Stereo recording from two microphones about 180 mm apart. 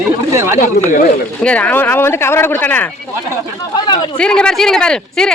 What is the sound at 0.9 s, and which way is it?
Speech, 45° left (ahead or behind).